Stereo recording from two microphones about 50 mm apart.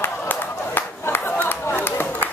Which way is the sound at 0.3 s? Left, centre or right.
Left.